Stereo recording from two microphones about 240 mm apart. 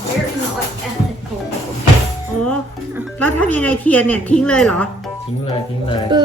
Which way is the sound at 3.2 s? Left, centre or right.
Centre.